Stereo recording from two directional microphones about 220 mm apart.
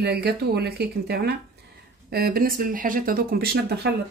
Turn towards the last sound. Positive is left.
turn(degrees=-45)  # may be behind; listen again after turning